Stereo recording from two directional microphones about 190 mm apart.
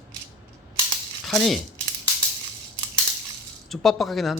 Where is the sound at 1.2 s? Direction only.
Centre (ahead or behind).